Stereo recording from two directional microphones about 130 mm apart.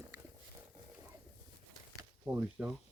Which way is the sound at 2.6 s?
10° right (ahead or behind).